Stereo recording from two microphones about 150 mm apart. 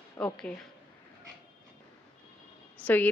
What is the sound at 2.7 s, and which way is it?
Speech, 10° left (ahead or behind).